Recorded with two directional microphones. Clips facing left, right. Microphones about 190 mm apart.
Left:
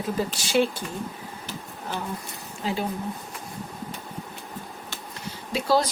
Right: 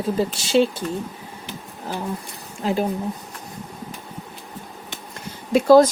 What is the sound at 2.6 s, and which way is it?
Speech, 45° right (ahead or behind).